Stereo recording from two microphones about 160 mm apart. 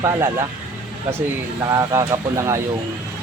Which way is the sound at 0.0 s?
20° right (ahead or behind).